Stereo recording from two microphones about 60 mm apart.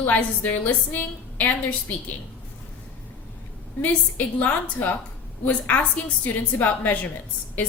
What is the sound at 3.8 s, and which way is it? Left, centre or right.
A woman's voice, left.